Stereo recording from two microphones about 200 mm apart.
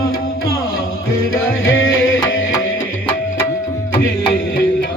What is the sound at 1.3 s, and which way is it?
Music, 85° left.